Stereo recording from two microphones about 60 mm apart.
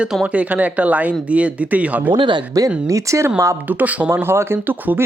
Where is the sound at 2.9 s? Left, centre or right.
Right.